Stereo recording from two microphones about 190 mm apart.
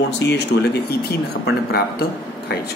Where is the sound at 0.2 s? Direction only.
65° left (ahead or behind).